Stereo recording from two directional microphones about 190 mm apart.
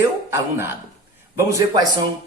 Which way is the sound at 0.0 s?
10° right (ahead or behind).